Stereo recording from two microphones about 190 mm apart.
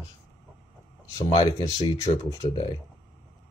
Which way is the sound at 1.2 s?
25° left (ahead or behind).